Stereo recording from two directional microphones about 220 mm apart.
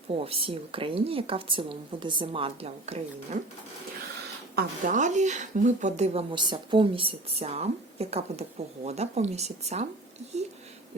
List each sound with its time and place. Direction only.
0.3 s speech: 25° right (ahead or behind)
4.5 s speech: 35° right (ahead or behind)